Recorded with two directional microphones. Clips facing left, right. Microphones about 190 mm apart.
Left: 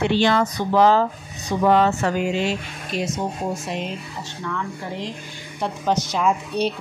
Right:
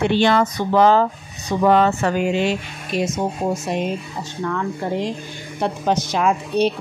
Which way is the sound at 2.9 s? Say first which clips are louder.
Right 4 dB; 50° right (ahead or behind).